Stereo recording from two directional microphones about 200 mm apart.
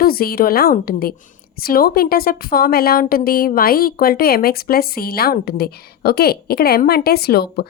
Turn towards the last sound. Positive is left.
turn(degrees=50)  # may be behind; listen again after turning